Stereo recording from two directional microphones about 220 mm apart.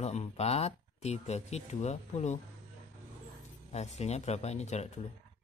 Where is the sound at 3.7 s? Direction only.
30° left (ahead or behind).